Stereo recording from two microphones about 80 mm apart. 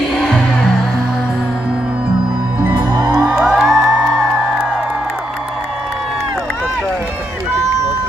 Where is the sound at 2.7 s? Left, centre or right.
Right.